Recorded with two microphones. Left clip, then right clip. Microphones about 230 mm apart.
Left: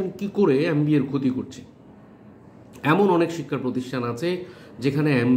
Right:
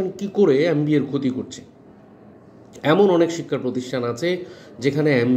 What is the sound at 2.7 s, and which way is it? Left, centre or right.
Speech, centre.